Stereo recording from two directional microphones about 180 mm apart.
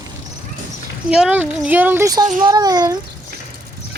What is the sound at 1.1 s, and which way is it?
A woman's voice, 5° right (ahead or behind).